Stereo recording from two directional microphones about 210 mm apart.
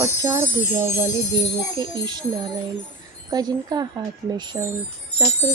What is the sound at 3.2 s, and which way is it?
A child's voice, 20° right (ahead or behind).